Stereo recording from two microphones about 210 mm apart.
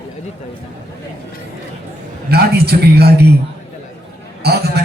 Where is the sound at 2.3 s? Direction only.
50° right (ahead or behind).